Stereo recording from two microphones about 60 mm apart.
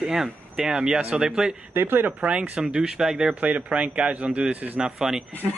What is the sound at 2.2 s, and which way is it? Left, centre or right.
Speech, centre.